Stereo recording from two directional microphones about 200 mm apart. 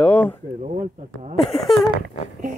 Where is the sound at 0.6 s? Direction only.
35° right (ahead or behind).